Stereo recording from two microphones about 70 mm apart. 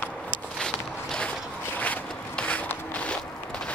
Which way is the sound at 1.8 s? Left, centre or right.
Left.